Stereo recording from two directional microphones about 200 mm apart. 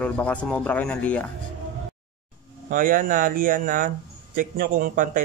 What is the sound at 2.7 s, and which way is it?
Speech, 45° right (ahead or behind).